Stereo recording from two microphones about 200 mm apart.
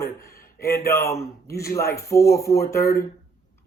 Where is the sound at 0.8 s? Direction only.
15° left (ahead or behind).